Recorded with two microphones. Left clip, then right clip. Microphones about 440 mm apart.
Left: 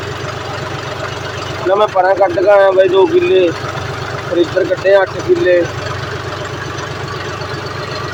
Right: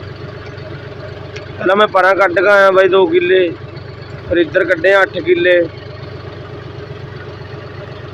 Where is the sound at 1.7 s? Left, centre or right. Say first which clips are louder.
Right 1 dB; right.